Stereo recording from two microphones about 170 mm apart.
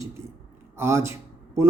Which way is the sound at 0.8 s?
15° right (ahead or behind).